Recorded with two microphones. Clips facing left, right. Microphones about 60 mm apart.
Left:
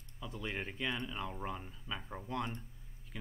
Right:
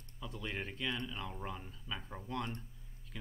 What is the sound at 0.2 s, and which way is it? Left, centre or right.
Speech, centre.